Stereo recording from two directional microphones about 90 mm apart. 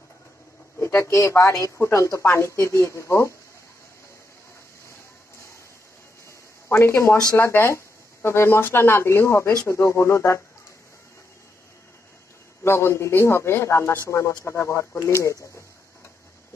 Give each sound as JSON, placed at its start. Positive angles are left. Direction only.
{"t": 0.7, "sound": "speech", "side_deg": 30}
{"t": 6.7, "sound": "speech", "side_deg": 30}
{"t": 12.6, "sound": "speech", "side_deg": 30}